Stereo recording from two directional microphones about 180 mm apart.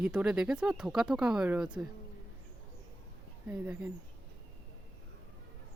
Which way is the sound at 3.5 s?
10° right (ahead or behind).